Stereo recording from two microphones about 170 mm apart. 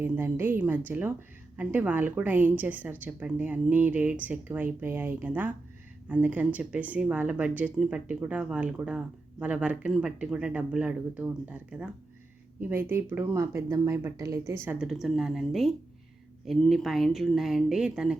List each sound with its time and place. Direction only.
0.0 s speech: 15° right (ahead or behind)